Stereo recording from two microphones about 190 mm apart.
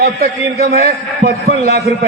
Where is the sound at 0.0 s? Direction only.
55° right (ahead or behind).